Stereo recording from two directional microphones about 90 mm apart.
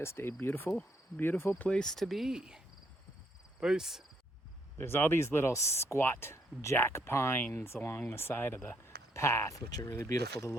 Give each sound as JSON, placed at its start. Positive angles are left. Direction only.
{"t": 0.0, "sound": "speech", "side_deg": 25}
{"t": 3.6, "sound": "cricket", "side_deg": -5}
{"t": 4.8, "sound": "speech", "side_deg": 25}